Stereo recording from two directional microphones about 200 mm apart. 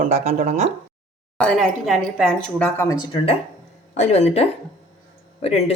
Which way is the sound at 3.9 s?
35° left (ahead or behind).